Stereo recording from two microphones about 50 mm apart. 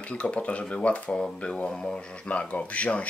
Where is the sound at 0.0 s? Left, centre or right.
Left.